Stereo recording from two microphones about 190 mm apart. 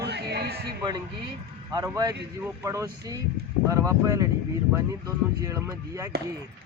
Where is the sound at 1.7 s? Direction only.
20° right (ahead or behind).